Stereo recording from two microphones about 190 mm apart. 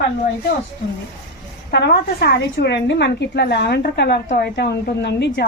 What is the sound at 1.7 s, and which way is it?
A woman's voice, 60° left (ahead or behind).